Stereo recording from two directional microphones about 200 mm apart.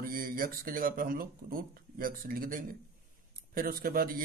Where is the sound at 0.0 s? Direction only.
45° right (ahead or behind).